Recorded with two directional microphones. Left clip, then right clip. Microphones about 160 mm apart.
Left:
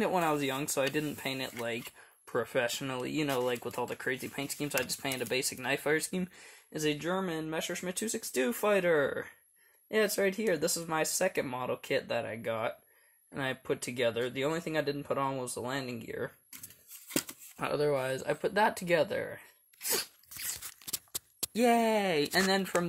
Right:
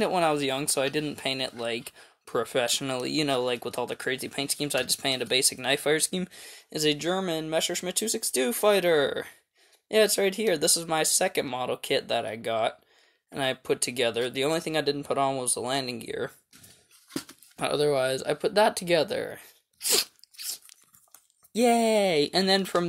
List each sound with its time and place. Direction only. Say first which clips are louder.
0.0 s speech: right 5 dB; 30° right (ahead or behind)
17.6 s speech: right 6 dB; 40° right (ahead or behind)
19.9 s crunch: right 9 dB; 40° right (ahead or behind)
21.5 s speech: right 5 dB; 35° right (ahead or behind)